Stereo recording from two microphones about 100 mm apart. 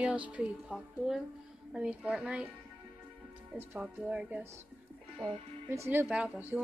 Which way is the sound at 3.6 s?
20° right (ahead or behind).